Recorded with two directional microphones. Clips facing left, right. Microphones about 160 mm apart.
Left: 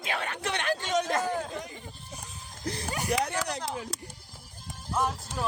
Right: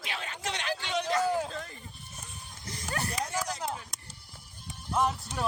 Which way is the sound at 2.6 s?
65° left (ahead or behind).